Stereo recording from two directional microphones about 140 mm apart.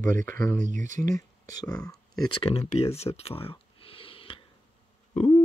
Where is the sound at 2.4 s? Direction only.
50° left (ahead or behind).